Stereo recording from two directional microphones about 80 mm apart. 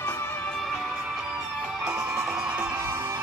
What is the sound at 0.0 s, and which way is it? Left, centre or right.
Music, left.